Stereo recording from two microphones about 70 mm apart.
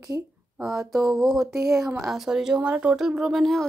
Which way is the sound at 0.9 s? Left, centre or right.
Centre.